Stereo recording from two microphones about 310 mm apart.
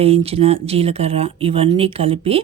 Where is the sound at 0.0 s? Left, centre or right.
Centre.